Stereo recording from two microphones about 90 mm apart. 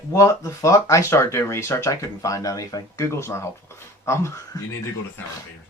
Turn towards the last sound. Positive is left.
turn(degrees=30)  # may be behind; listen again after turning